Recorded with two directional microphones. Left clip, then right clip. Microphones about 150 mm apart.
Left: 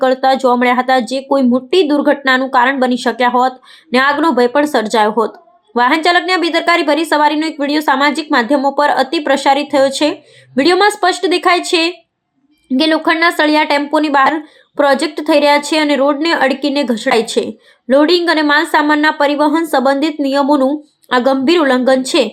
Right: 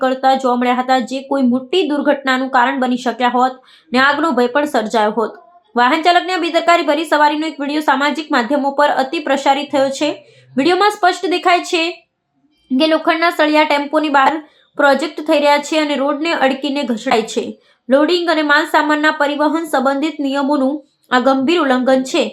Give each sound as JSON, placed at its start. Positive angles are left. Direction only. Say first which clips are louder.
{"t": 0.0, "sound": "a woman's voice", "louder": "left 2 dB", "side_deg": 25}